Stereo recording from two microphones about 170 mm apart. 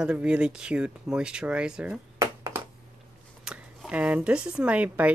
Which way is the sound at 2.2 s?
20° right (ahead or behind).